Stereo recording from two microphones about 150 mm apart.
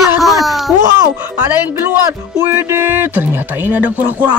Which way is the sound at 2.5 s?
15° right (ahead or behind).